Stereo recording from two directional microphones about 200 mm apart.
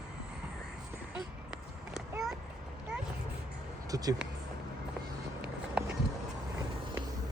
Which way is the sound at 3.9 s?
15° right (ahead or behind).